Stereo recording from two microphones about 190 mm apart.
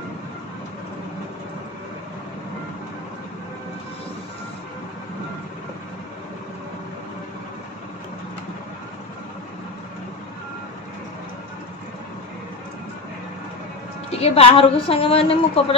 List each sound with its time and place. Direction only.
14.1 s a woman's voice: 30° left (ahead or behind)